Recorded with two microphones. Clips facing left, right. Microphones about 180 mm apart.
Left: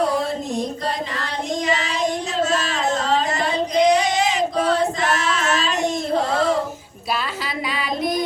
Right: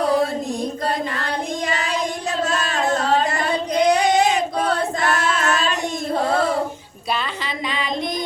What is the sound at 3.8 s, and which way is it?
Singing, 60° right (ahead or behind).